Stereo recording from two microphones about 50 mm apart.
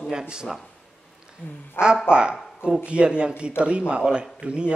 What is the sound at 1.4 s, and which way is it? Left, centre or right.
Speech, left.